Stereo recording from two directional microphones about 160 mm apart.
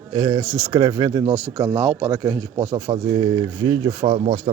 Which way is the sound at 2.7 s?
30° right (ahead or behind).